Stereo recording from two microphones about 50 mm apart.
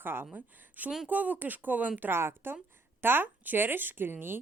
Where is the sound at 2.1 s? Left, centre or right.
Right.